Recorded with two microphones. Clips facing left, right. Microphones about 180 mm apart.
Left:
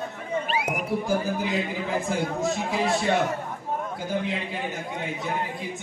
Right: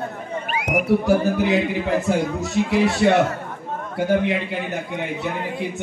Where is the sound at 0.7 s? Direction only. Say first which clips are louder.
Right 11 dB; 70° right (ahead or behind).